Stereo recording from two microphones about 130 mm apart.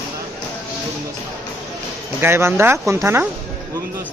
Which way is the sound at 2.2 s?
20° right (ahead or behind).